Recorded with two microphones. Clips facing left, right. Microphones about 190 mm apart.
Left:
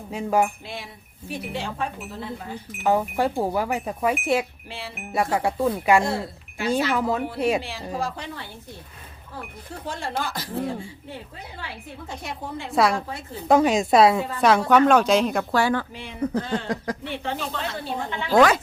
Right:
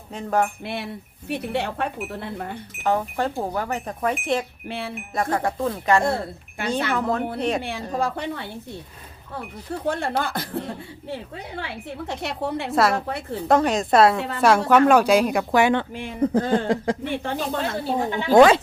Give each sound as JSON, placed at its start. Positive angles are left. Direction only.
{"t": 0.1, "sound": "speech", "side_deg": 10}
{"t": 0.6, "sound": "speech", "side_deg": -65}
{"t": 2.8, "sound": "speech", "side_deg": 10}
{"t": 6.0, "sound": "speech", "side_deg": -55}
{"t": 7.3, "sound": "speech", "side_deg": 5}
{"t": 7.6, "sound": "speech", "side_deg": -55}
{"t": 9.8, "sound": "speech", "side_deg": -60}
{"t": 12.0, "sound": "a woman's voice", "side_deg": -75}
{"t": 12.7, "sound": "a woman's voice", "side_deg": 0}
{"t": 16.3, "sound": "speech", "side_deg": -50}
{"t": 16.6, "sound": "speech", "side_deg": -25}
{"t": 17.0, "sound": "speech", "side_deg": -45}
{"t": 18.3, "sound": "speech", "side_deg": -30}